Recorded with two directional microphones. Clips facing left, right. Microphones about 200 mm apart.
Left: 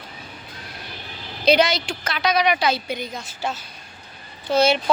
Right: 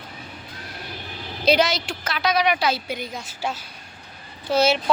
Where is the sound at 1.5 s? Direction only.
5° right (ahead or behind).